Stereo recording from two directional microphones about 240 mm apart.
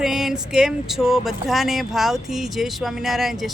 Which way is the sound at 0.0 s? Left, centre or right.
Centre.